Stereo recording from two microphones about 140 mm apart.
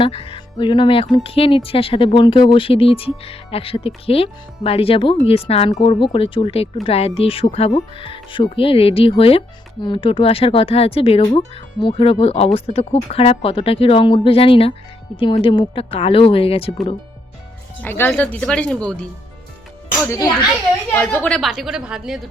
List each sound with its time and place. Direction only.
0.0 s speech: 40° left (ahead or behind)
17.8 s speech: 15° left (ahead or behind)
20.1 s a child's voice: 25° left (ahead or behind)
20.9 s a woman's voice: 10° left (ahead or behind); by 22.2 s 5° right (ahead or behind)